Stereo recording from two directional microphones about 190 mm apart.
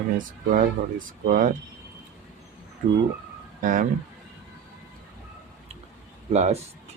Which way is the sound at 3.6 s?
45° right (ahead or behind).